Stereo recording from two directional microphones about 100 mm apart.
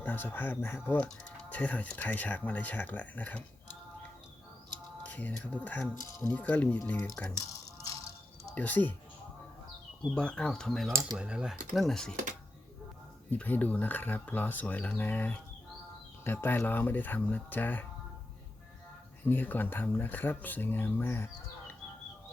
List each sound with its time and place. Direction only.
0.0 s speech: 20° left (ahead or behind)
5.0 s a sound: 15° left (ahead or behind)
5.6 s speech: 15° left (ahead or behind)
8.5 s speech: 15° left (ahead or behind)
10.2 s speech: 10° left (ahead or behind)
11.2 s speech: 10° right (ahead or behind)
13.3 s speech: 15° left (ahead or behind)
19.2 s speech: 20° left (ahead or behind)